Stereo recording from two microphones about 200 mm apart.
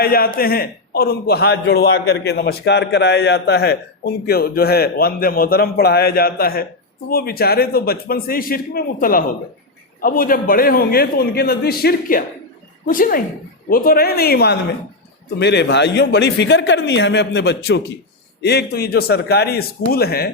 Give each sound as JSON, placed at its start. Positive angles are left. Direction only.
{"t": 0.0, "sound": "a man's voice", "side_deg": 50}